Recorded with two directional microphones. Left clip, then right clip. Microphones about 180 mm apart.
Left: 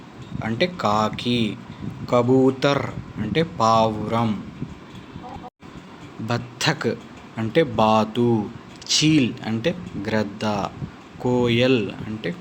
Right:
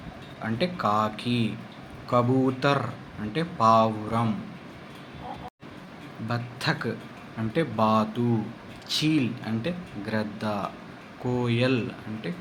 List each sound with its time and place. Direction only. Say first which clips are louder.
0.4 s speech: left 4 dB; 35° left (ahead or behind)
6.2 s speech: left 6 dB; 40° left (ahead or behind)